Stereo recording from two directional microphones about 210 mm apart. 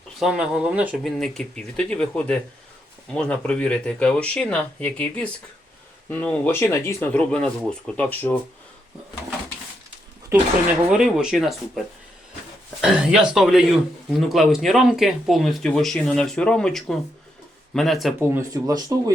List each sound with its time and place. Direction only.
0.2 s speech: 5° right (ahead or behind)
10.9 s speech: 5° right (ahead or behind)
12.8 s speech: 5° right (ahead or behind)
18.2 s speech: 10° right (ahead or behind)